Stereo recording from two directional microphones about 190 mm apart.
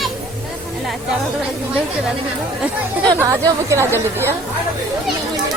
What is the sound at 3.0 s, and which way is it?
Speech, 15° right (ahead or behind).